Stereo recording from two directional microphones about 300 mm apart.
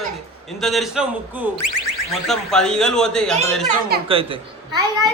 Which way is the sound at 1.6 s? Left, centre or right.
Left.